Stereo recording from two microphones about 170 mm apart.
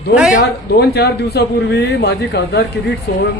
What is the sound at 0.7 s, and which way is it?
Speech, 75° left (ahead or behind).